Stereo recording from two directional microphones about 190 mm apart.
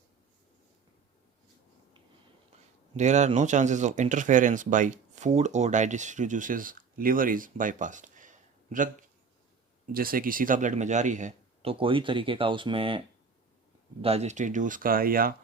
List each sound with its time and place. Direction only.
2.9 s speech: 40° right (ahead or behind)
14.0 s speech: 35° right (ahead or behind); by 15.4 s 50° right (ahead or behind)